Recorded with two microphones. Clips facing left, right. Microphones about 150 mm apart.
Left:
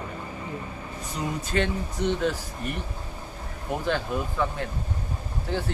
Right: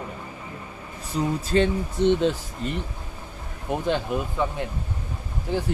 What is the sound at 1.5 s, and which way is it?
Speech, 25° right (ahead or behind).